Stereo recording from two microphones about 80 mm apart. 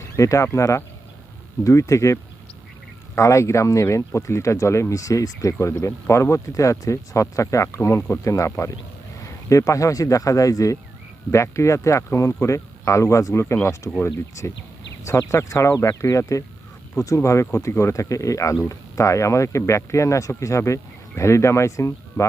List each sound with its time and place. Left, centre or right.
0.2 s speech: left
3.2 s speech: left